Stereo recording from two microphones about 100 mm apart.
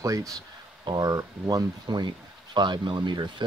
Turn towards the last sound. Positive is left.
turn(degrees=-50)  # may be behind; listen again after turning